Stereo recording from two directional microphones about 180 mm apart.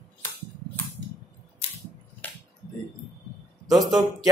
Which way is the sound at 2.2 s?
10° left (ahead or behind).